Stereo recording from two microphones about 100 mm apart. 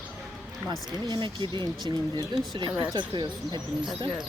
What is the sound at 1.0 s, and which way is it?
Speech, 50° right (ahead or behind).